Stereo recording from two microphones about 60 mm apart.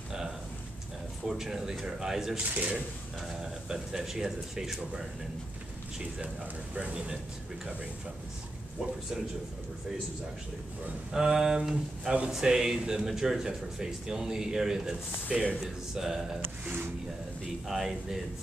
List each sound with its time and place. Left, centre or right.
1.2 s speech: centre
2.5 s speech: right
3.2 s speech: centre
6.1 s speech: centre
11.1 s speech: centre
15.2 s speech: right
15.6 s speech: centre
16.3 s a sound: right
17.6 s speech: centre